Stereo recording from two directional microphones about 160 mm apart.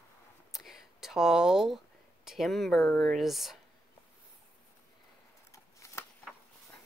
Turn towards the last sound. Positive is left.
turn(degrees=20)  # may be behind; listen again after turning